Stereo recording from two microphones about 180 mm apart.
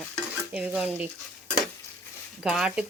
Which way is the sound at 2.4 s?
5° right (ahead or behind).